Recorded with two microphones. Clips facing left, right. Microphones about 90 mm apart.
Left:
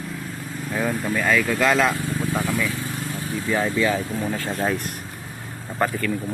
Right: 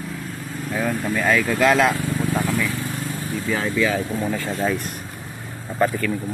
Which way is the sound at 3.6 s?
20° left (ahead or behind).